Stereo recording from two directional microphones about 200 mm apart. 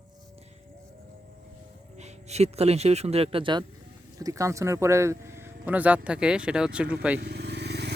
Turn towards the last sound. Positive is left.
turn(degrees=-55)  # may be behind; listen again after turning